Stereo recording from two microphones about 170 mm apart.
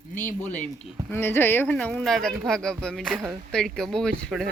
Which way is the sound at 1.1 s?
15° left (ahead or behind).